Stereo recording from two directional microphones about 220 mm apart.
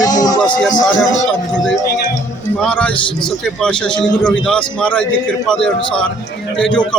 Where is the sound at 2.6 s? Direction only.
5° left (ahead or behind).